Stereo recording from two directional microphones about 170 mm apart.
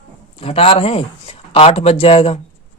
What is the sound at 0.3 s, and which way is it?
Speech, 35° left (ahead or behind).